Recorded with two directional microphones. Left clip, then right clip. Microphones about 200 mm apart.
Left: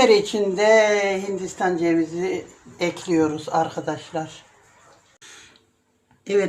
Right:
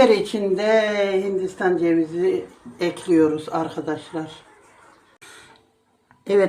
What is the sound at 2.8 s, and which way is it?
Speech, 5° right (ahead or behind).